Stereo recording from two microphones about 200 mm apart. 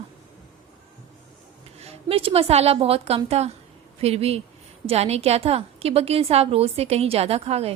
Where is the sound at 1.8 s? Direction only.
30° right (ahead or behind).